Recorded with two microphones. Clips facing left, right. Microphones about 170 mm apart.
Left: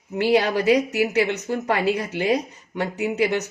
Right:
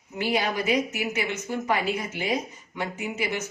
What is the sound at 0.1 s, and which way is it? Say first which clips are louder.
A woman's voice: left 7 dB; 65° left (ahead or behind).